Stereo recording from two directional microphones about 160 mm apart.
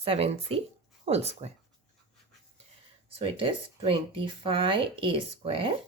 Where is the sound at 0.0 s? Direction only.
40° right (ahead or behind).